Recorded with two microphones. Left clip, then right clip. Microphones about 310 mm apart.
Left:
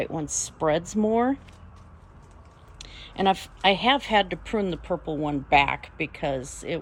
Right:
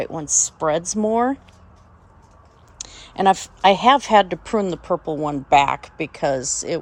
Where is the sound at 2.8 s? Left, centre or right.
Right.